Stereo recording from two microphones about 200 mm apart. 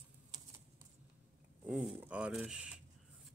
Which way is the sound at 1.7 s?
5° right (ahead or behind).